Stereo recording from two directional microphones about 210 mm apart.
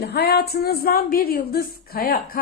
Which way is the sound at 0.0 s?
50° left (ahead or behind).